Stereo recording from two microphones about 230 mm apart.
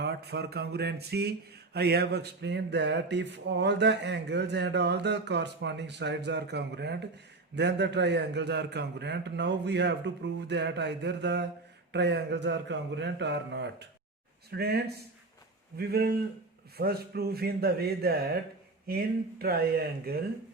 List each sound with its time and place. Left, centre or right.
0.0 s speech: right